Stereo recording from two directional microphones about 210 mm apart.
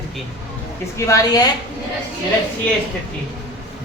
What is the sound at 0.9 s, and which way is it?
Speech, 15° left (ahead or behind).